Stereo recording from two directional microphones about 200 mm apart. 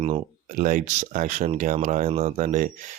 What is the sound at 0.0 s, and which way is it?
Speech, 30° right (ahead or behind).